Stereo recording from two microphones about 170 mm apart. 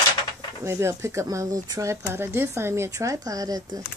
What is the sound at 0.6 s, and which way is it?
Speech, 15° right (ahead or behind).